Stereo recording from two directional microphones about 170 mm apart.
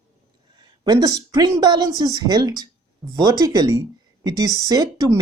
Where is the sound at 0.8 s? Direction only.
25° right (ahead or behind).